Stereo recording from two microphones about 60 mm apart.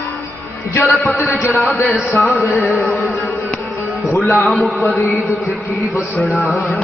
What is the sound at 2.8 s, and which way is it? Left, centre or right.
Music, left.